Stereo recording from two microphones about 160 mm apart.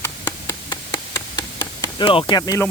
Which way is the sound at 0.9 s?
30° left (ahead or behind).